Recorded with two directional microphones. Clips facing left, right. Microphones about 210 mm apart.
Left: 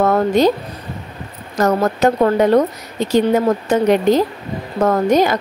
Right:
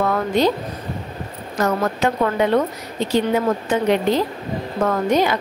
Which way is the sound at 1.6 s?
40° left (ahead or behind).